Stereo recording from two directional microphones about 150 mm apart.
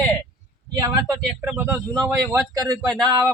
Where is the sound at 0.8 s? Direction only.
20° right (ahead or behind).